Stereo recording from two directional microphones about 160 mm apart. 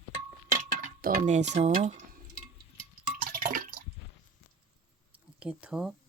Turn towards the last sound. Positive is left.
turn(degrees=-5)  # may be behind; listen again after turning